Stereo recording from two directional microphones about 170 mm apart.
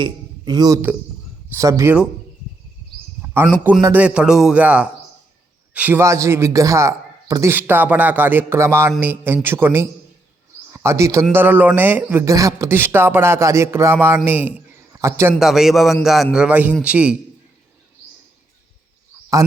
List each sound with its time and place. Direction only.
0.0 s a man's voice: 25° right (ahead or behind)
3.2 s a sound: 10° right (ahead or behind)
3.6 s a man's voice: 10° right (ahead or behind)
15.4 s a man's voice: centre (ahead or behind)